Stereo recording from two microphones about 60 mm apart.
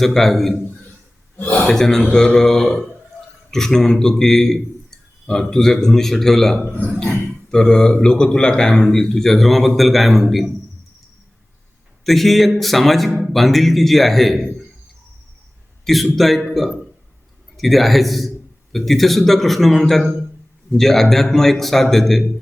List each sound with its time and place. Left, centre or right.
0.0 s a man's voice: centre
1.4 s a man's voice: left
1.6 s a man's voice: centre
6.7 s speech: left
7.5 s a man's voice: centre
12.0 s a man's voice: centre
15.8 s a man's voice: centre